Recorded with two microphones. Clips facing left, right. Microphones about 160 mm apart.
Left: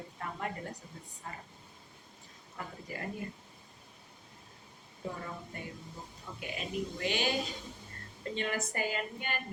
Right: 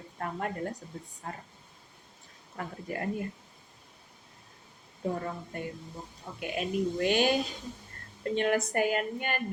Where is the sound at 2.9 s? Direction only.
55° right (ahead or behind).